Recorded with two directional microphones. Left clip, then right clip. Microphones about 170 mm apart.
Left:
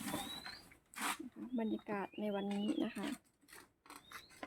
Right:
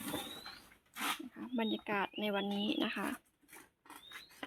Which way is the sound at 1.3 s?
Centre (ahead or behind).